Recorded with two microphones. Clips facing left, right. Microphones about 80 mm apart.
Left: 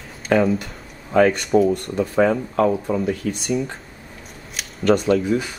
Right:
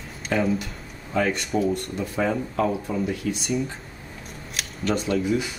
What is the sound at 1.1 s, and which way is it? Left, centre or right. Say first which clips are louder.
Speech: left 8 dB; left.